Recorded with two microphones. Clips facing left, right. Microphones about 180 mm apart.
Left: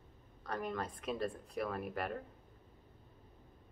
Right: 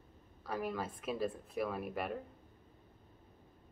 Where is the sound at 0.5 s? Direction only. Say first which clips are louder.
Right 1 dB; 5° right (ahead or behind).